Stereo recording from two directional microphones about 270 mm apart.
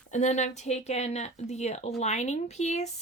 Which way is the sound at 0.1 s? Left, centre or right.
Left.